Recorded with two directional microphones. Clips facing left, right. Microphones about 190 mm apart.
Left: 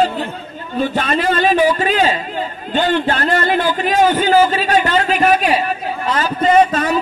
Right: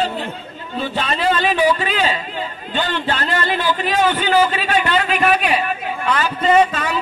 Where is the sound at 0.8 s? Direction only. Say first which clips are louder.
Left 4 dB; 45° left (ahead or behind).